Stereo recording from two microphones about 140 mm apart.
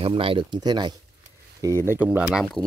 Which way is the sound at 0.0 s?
40° right (ahead or behind).